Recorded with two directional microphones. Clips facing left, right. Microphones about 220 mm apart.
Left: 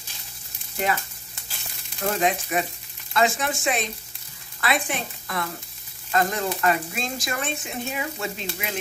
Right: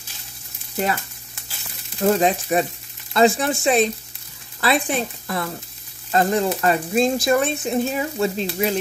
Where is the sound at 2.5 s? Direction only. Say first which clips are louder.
Right 6 dB; 35° right (ahead or behind).